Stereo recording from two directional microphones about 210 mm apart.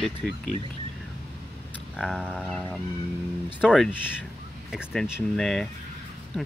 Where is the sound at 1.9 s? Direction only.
Centre (ahead or behind).